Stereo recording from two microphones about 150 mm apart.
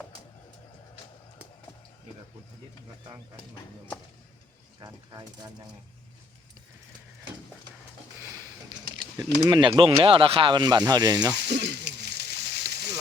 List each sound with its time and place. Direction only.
4.8 s speech: 25° right (ahead or behind)
9.5 s speech: 30° right (ahead or behind)
11.4 s a sound: 90° right